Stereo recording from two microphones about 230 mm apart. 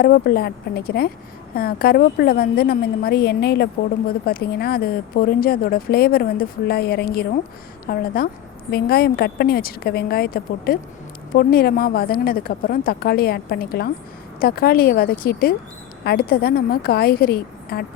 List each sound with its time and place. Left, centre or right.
0.0 s a woman's voice: left